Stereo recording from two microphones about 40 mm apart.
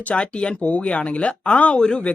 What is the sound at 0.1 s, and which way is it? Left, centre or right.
Speech, left.